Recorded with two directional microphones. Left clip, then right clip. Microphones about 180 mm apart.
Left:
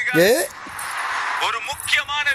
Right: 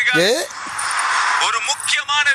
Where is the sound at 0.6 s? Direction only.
30° right (ahead or behind).